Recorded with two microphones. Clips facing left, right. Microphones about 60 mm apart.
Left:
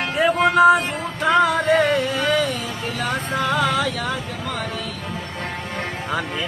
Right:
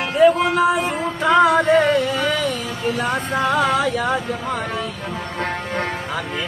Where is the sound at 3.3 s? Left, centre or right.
Centre.